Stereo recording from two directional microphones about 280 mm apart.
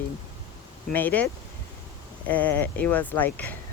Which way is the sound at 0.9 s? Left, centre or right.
Centre.